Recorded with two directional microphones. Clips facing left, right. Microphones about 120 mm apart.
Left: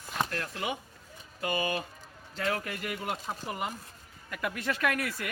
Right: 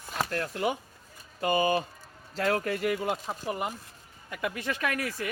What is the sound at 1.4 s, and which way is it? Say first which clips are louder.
Speech: right 6 dB; 35° right (ahead or behind).